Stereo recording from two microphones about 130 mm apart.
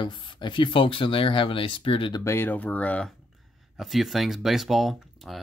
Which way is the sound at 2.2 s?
15° left (ahead or behind).